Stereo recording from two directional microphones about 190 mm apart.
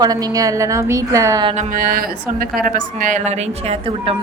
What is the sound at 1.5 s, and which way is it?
A woman's voice, 50° right (ahead or behind).